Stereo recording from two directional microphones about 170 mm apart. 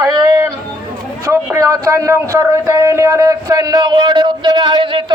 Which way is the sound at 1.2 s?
15° right (ahead or behind).